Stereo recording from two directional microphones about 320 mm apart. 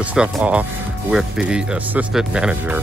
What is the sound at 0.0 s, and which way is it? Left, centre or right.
Speech, centre.